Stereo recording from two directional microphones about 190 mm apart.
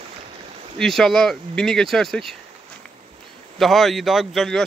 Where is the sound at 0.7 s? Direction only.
Centre (ahead or behind).